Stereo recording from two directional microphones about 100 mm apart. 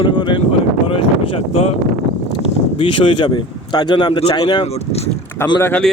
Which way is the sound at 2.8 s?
60° left (ahead or behind).